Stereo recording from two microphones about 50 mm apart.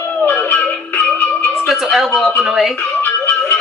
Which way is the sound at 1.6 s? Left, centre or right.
Centre.